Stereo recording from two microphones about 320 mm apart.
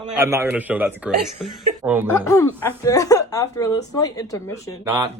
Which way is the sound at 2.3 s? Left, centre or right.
Centre.